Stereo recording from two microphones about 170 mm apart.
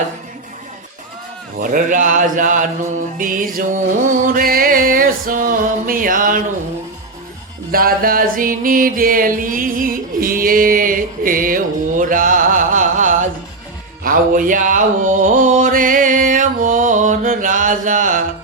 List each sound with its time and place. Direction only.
1.6 s speech: 50° right (ahead or behind)
3.2 s music: 55° right (ahead or behind)
7.7 s music: 60° right (ahead or behind)
14.0 s mantra: 55° right (ahead or behind)